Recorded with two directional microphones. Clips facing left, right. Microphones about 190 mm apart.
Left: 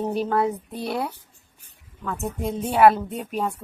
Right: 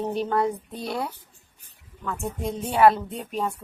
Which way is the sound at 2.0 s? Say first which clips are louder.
Left 2 dB; 30° left (ahead or behind).